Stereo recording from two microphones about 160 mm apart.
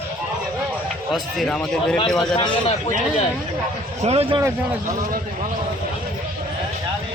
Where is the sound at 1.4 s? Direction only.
5° left (ahead or behind).